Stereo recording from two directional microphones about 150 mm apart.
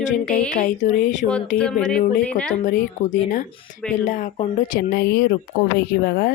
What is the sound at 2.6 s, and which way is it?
Speech, 60° left (ahead or behind).